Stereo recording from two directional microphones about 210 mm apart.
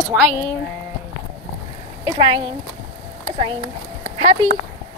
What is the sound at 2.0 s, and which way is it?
Speech, 25° right (ahead or behind).